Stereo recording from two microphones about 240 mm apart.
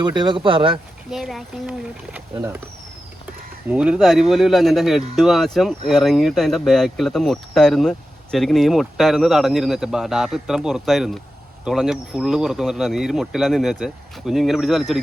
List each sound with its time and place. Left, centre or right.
0.0 s speech: centre
1.1 s speech: centre
3.7 s speech: centre